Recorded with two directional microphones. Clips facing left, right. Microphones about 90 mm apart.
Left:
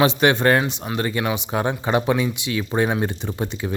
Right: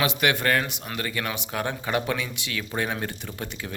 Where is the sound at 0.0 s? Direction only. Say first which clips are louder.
Left 7 dB; 30° left (ahead or behind).